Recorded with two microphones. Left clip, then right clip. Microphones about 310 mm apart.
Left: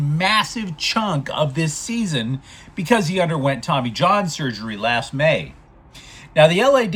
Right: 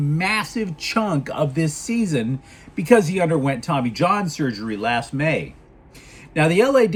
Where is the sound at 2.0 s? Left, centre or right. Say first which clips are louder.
Right 2 dB; centre.